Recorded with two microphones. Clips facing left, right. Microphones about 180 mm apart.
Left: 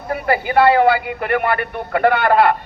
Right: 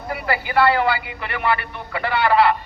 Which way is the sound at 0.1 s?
50° left (ahead or behind).